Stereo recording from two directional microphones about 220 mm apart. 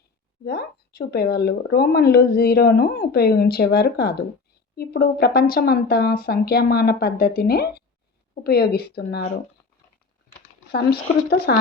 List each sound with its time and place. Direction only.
0.4 s speech: 45° left (ahead or behind)
10.7 s speech: 45° left (ahead or behind)